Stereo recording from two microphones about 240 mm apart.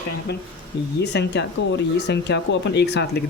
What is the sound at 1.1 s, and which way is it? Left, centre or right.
Speech, left.